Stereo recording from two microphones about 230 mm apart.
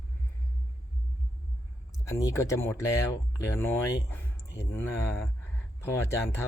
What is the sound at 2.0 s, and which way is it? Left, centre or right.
Speech, centre.